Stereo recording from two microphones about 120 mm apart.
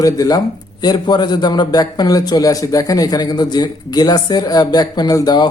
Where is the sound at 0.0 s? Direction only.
30° left (ahead or behind).